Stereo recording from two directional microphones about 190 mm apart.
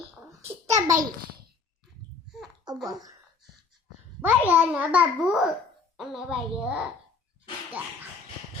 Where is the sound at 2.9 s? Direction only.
20° right (ahead or behind).